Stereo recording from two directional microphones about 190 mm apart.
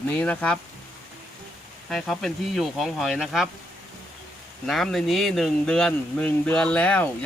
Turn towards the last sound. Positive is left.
turn(degrees=5)  # may be behind; listen again after turning